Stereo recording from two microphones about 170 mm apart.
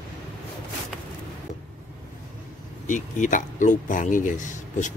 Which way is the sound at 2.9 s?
50° left (ahead or behind).